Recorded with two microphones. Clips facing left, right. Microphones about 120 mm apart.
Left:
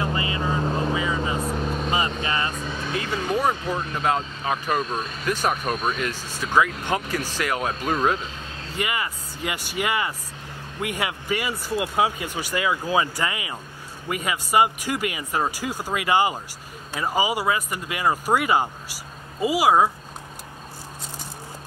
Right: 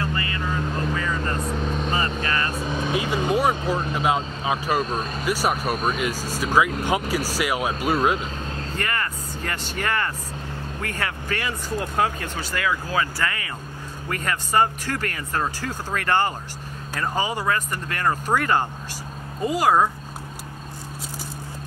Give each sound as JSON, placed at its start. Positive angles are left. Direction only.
{"t": 0.0, "sound": "vehicle", "side_deg": 20}
{"t": 2.5, "sound": "vehicle", "side_deg": -15}
{"t": 5.2, "sound": "speech", "side_deg": -10}
{"t": 6.1, "sound": "speech", "side_deg": -40}
{"t": 6.4, "sound": "speech", "side_deg": -10}
{"t": 8.7, "sound": "speech", "side_deg": 10}